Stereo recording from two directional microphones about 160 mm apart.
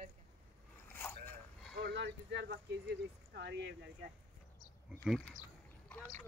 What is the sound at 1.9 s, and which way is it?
Speech, 90° right.